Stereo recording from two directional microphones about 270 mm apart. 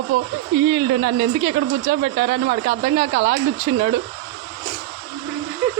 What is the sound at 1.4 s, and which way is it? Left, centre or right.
Speech, centre.